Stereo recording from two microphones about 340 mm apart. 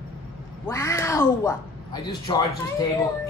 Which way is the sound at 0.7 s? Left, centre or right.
Centre.